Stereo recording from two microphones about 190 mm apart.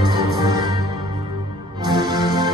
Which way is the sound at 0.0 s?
25° right (ahead or behind).